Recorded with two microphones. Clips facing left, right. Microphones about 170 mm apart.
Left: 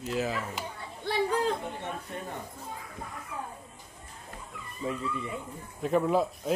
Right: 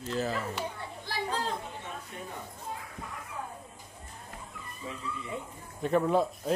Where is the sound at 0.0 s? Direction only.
5° left (ahead or behind).